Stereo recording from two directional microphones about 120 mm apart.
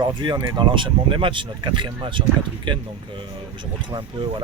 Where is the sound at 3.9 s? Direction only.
45° right (ahead or behind).